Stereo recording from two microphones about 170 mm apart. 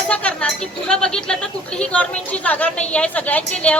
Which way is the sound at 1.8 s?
10° left (ahead or behind).